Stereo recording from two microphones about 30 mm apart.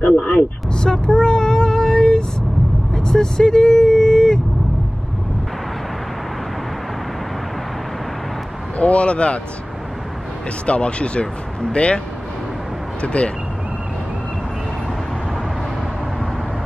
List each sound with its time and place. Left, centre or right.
0.0 s vehicle: left
0.7 s vehicle: left
2.9 s speech: centre
8.7 s speech: left
10.7 s speech: left
13.0 s speech: left